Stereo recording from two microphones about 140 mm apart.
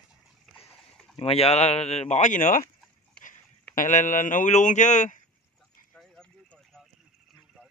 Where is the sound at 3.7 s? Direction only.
65° left (ahead or behind).